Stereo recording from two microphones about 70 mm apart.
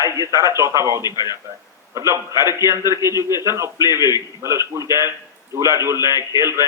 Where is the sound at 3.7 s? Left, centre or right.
Left.